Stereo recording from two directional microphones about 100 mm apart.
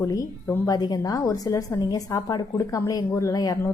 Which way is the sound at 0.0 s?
35° left (ahead or behind).